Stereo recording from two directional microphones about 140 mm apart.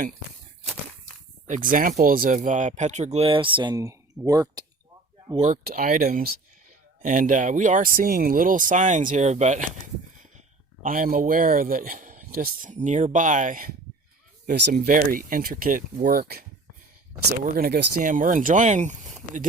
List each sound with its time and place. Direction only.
1.5 s speech: 70° right (ahead or behind); by 4.6 s 25° right (ahead or behind)
5.4 s speech: 70° right (ahead or behind); by 6.3 s 90° right
7.0 s speech: 65° right (ahead or behind)
10.8 s speech: 80° right
17.4 s speech: 80° right; by 19.5 s 60° right (ahead or behind)